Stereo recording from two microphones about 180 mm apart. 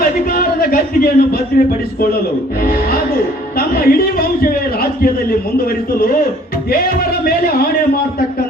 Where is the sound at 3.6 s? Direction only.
55° left (ahead or behind).